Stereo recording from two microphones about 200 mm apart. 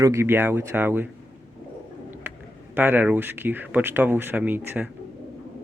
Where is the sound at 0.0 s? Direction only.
15° right (ahead or behind).